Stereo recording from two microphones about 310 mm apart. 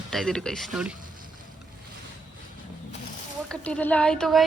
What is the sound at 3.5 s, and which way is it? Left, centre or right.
Speech, centre.